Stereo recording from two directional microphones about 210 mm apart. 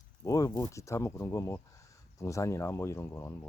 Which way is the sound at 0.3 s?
15° left (ahead or behind).